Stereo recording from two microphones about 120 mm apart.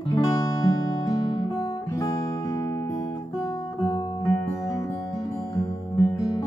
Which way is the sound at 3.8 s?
30° left (ahead or behind).